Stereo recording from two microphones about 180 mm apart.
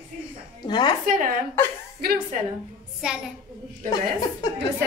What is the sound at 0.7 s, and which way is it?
Speech, 25° left (ahead or behind).